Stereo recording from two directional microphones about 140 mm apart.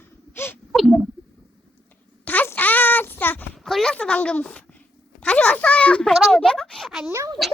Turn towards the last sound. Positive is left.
turn(degrees=-20)  # may be behind; listen again after turning